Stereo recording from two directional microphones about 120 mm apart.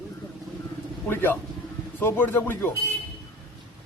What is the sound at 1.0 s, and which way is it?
A man's voice, 15° left (ahead or behind).